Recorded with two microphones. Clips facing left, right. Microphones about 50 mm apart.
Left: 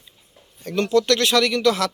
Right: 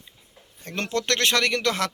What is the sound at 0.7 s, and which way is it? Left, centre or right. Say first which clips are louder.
Speech: left 7 dB; right.